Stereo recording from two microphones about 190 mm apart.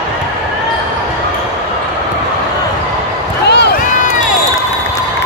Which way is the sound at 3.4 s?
60° left (ahead or behind).